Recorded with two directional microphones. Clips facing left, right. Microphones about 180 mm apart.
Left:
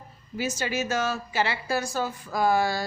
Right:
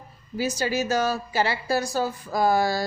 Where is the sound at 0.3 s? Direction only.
35° right (ahead or behind).